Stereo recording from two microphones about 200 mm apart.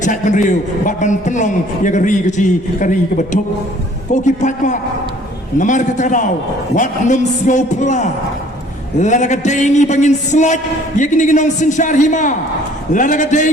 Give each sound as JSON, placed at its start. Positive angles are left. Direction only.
{"t": 0.0, "sound": "a man's voice", "side_deg": 40}